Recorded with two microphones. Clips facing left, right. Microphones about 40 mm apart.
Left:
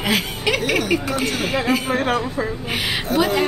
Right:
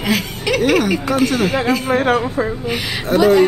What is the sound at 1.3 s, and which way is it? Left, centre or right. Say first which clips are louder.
Speech: right 5 dB; centre.